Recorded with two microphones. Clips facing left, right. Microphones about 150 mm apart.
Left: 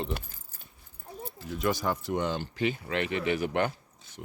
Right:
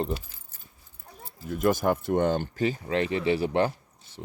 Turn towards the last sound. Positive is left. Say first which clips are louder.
# right 3 dB
turn(degrees=-30)  # may be behind; listen again after turning